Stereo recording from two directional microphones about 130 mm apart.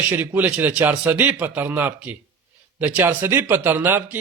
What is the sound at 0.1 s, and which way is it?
Speech, 15° right (ahead or behind).